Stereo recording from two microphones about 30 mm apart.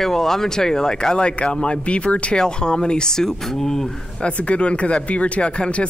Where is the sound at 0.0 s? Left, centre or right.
Centre; by 2.3 s left.